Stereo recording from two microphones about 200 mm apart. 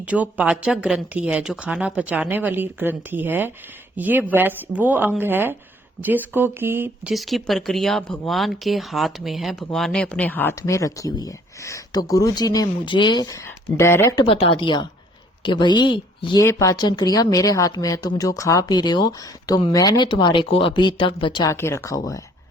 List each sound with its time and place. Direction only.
0.0 s a woman's voice: 5° right (ahead or behind); by 14.3 s 10° left (ahead or behind)
14.3 s speech: 25° left (ahead or behind)